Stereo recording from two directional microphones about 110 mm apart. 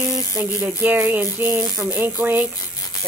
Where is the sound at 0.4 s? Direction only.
15° right (ahead or behind).